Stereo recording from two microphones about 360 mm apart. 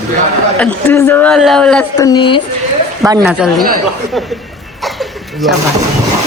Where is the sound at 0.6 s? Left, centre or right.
Centre.